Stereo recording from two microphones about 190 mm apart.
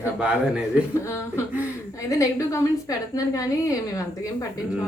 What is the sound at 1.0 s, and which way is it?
A woman's voice, 15° left (ahead or behind).